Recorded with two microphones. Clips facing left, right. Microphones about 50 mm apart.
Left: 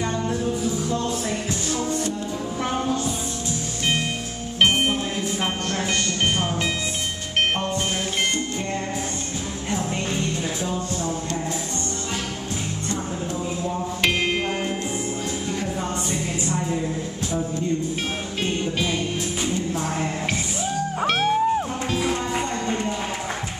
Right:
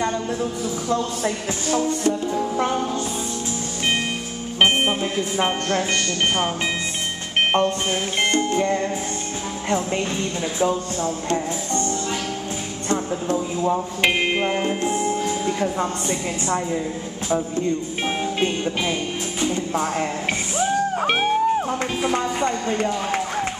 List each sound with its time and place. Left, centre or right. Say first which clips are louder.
0.0 s music: right 2 dB; centre
1.2 s music: right 2 dB; right
4.6 s music: right 1 dB; right
10.6 s music: right 5 dB; right
12.9 s music: right 8 dB; right
14.0 s music: right 2 dB; centre
18.4 s music: left 1 dB; centre
21.1 s music: even; centre